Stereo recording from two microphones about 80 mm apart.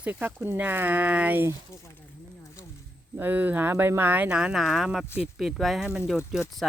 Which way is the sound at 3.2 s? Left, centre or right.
Right.